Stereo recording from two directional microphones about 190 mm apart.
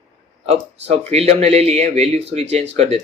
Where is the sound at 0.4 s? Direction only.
35° right (ahead or behind).